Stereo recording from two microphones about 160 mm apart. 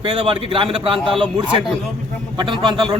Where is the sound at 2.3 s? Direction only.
30° right (ahead or behind).